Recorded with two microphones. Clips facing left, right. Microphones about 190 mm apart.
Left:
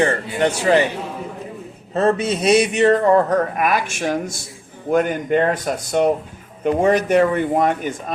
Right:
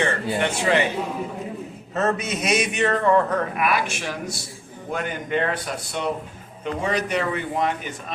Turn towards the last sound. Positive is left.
turn(degrees=50)  # may be behind; listen again after turning